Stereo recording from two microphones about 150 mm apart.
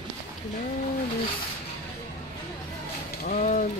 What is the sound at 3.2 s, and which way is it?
Speech, 60° left (ahead or behind).